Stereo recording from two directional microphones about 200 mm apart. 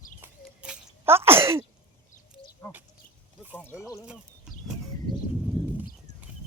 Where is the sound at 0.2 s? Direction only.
10° right (ahead or behind).